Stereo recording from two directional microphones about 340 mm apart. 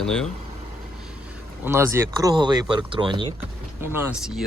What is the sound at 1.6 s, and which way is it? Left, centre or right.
Speech, centre.